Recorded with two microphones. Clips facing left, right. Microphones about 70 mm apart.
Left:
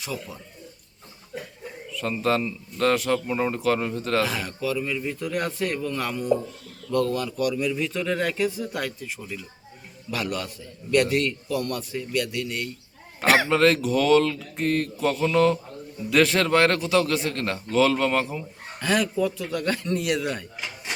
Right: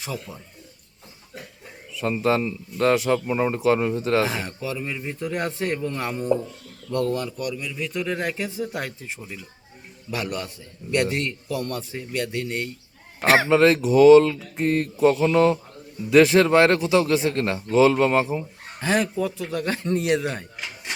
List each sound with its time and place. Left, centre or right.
0.0 s speech: right
1.9 s speech: centre
7.3 s a man's voice: centre
7.8 s speech: centre; by 20.4 s right